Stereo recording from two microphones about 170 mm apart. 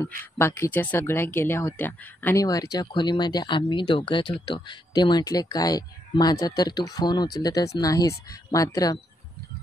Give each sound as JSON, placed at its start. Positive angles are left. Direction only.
{"t": 0.4, "sound": "speech", "side_deg": 15}
{"t": 2.4, "sound": "speech", "side_deg": 20}